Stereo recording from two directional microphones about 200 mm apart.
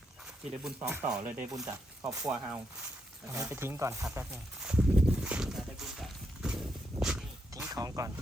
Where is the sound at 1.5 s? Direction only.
15° right (ahead or behind).